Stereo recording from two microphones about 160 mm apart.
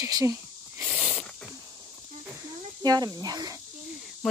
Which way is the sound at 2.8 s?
25° right (ahead or behind).